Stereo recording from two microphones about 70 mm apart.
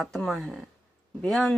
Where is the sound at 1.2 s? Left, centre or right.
Centre.